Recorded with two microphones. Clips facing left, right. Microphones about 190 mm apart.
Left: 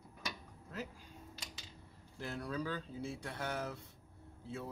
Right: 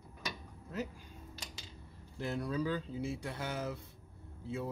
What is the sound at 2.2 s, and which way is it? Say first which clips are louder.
Speech: right 5 dB; 20° right (ahead or behind).